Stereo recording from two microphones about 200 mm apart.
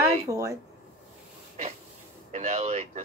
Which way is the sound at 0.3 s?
15° right (ahead or behind).